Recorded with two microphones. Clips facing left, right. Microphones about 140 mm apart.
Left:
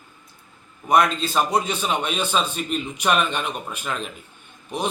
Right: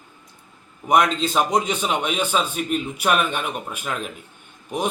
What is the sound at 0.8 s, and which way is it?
A man's voice, 15° right (ahead or behind).